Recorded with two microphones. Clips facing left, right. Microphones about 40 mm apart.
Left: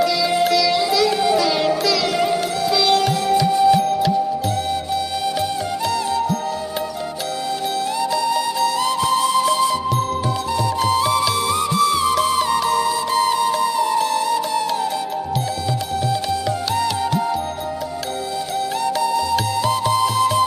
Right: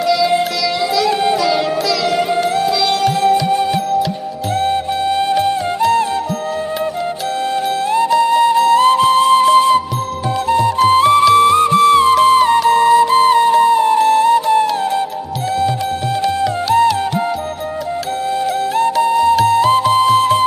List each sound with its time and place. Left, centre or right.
0.0 s music: centre
3.4 s music: right
7.9 s music: right
16.7 s music: right
19.0 s music: right